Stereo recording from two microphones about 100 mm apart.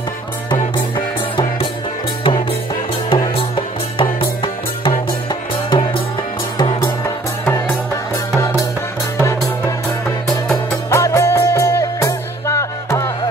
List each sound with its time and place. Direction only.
0.5 s music: 55° left (ahead or behind)
5.3 s music: 50° left (ahead or behind)
9.2 s music: 30° left (ahead or behind)
10.2 s music: 5° left (ahead or behind)
10.9 s music: 30° left (ahead or behind)